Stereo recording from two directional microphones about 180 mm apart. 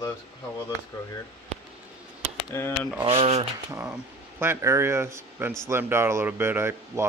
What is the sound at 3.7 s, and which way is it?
Speech, 10° right (ahead or behind).